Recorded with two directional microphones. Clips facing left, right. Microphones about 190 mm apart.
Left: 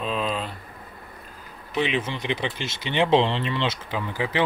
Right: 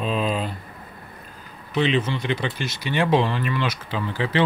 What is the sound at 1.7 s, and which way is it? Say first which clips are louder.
Speech: right 4 dB; 10° left (ahead or behind).